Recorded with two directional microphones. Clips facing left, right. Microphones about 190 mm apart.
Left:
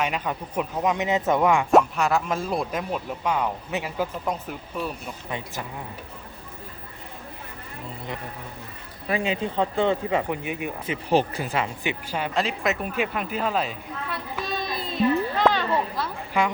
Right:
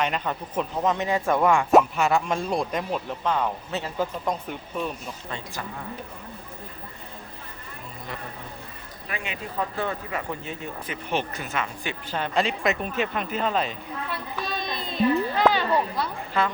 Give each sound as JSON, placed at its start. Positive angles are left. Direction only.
{"t": 0.0, "sound": "speech", "side_deg": 10}
{"t": 1.7, "sound": "speech", "side_deg": 0}
{"t": 9.0, "sound": "speech", "side_deg": 30}
{"t": 10.8, "sound": "speech", "side_deg": 35}
{"t": 11.8, "sound": "speech", "side_deg": 15}
{"t": 16.4, "sound": "speech", "side_deg": 15}